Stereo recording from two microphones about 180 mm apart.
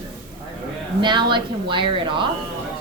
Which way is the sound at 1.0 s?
25° right (ahead or behind).